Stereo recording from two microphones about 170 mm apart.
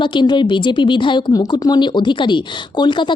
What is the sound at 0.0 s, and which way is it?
A woman's voice, 25° left (ahead or behind).